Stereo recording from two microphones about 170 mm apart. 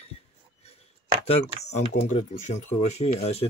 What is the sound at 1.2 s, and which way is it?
Speech, 40° left (ahead or behind).